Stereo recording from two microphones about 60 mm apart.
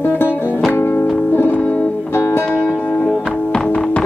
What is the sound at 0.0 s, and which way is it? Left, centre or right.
Music, left.